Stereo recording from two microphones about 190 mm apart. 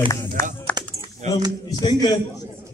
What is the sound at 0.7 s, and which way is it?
Typing, 10° left (ahead or behind).